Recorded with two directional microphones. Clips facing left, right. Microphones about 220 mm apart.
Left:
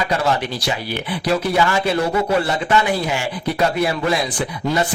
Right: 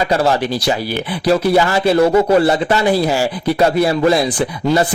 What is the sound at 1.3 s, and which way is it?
Speech, 35° right (ahead or behind).